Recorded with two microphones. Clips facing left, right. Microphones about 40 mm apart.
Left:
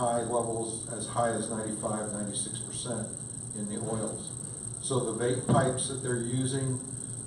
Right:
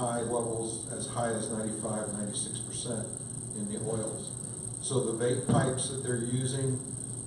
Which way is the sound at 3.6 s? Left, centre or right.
Centre.